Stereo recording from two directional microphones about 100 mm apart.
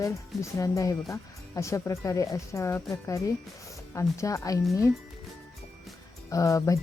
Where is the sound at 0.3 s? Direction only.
Centre (ahead or behind).